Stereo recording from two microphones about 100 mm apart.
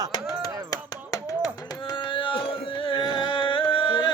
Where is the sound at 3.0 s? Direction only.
50° right (ahead or behind).